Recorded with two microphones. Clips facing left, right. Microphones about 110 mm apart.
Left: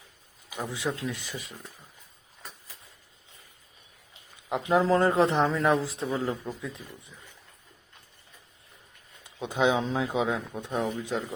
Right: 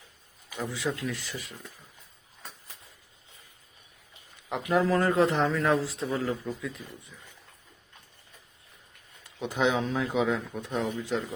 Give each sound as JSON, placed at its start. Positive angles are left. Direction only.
{"t": 0.5, "sound": "a man's voice", "side_deg": 20}
{"t": 4.4, "sound": "a man's voice", "side_deg": 20}
{"t": 9.4, "sound": "speech", "side_deg": 15}